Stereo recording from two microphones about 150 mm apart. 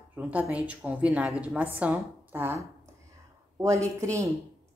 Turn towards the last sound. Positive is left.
turn(degrees=-20)  # may be behind; listen again after turning